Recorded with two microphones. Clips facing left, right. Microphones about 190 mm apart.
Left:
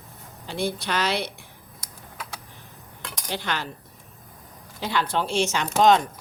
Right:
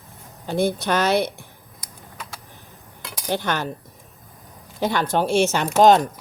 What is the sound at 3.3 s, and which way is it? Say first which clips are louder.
Speech: right 6 dB; 50° right (ahead or behind).